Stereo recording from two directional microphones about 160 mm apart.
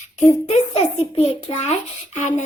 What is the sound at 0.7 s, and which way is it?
A child's voice, 40° left (ahead or behind).